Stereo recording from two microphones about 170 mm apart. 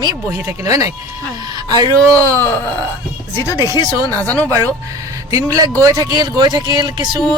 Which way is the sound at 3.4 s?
20° left (ahead or behind).